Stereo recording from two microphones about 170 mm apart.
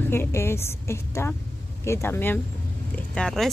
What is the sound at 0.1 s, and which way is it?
A woman's voice, 15° left (ahead or behind).